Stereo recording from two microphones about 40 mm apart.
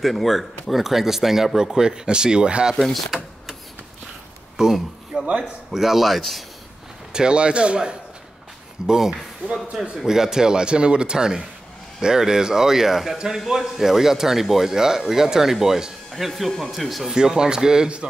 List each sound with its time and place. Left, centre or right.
0.0 s speech: centre; by 2.7 s right
3.1 s speech: centre
4.6 s speech: centre
7.1 s a man's voice: right; by 17.1 s centre
17.1 s speech: centre